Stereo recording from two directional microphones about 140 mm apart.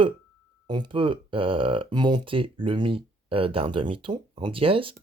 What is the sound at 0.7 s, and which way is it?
Speech, 35° right (ahead or behind).